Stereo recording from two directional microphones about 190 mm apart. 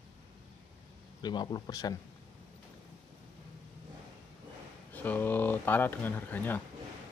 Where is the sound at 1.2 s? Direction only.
20° left (ahead or behind).